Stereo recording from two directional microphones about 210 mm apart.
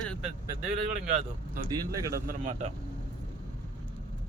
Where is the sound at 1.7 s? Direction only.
15° right (ahead or behind).